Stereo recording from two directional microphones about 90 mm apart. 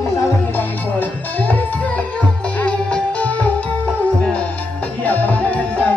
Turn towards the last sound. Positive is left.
turn(degrees=15)  # may be behind; listen again after turning